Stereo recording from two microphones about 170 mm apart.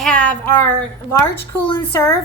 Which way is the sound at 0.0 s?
5° left (ahead or behind).